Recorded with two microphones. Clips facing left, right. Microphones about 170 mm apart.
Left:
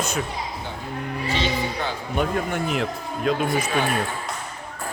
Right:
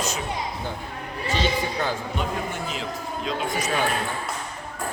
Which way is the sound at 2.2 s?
60° left (ahead or behind).